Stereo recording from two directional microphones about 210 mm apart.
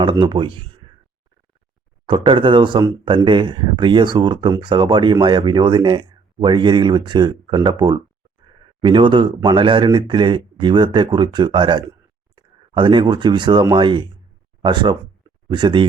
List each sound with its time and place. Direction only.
0.0 s speech: 20° right (ahead or behind)
2.0 s speech: 25° right (ahead or behind)